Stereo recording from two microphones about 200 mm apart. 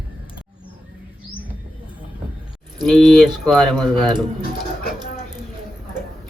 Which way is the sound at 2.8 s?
Centre (ahead or behind).